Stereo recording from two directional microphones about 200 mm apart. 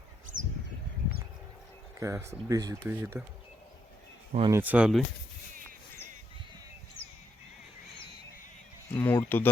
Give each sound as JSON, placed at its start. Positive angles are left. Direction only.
{"t": 0.3, "sound": "a sound", "side_deg": -75}
{"t": 2.0, "sound": "speech", "side_deg": -15}
{"t": 4.3, "sound": "speech", "side_deg": -30}
{"t": 4.5, "sound": "speech", "side_deg": -10}
{"t": 8.9, "sound": "speech", "side_deg": 10}